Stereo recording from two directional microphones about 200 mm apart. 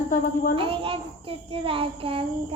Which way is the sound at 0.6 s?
30° right (ahead or behind).